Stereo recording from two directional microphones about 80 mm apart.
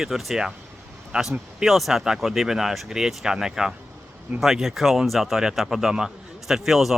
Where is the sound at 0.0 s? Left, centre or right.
Centre.